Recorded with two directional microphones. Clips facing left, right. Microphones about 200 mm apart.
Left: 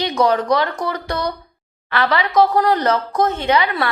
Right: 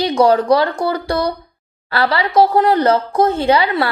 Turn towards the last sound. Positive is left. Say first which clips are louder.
# right 3 dB
turn(degrees=-30)  # may be behind; listen again after turning